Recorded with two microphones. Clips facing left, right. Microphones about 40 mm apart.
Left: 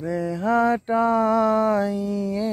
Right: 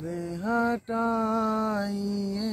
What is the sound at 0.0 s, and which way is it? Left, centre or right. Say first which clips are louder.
Mantra: left 7 dB; left.